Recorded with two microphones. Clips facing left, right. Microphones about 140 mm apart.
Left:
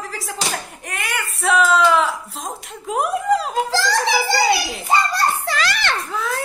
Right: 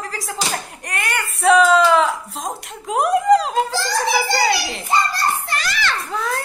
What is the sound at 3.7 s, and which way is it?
Speech, 90° left.